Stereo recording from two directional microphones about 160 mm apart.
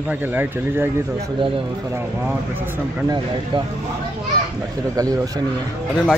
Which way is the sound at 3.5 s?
30° right (ahead or behind).